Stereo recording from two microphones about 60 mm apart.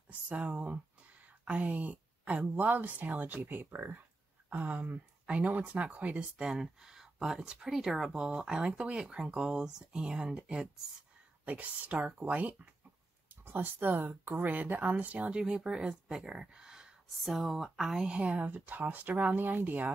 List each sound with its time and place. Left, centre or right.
0.3 s speech: right
6.4 s speech: centre
17.2 s speech: centre; by 19.9 s right